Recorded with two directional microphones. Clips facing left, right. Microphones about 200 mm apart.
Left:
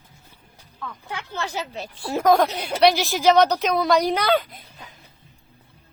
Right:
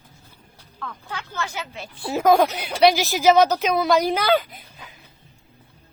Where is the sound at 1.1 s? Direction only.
30° left (ahead or behind).